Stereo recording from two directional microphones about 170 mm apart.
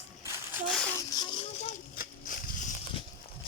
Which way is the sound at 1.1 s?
30° left (ahead or behind).